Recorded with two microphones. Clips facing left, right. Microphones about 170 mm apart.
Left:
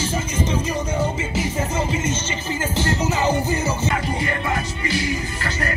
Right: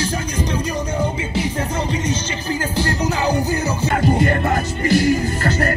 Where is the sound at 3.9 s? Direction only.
50° right (ahead or behind).